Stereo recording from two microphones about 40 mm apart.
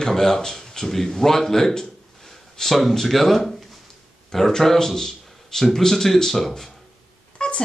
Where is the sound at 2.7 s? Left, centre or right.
Centre.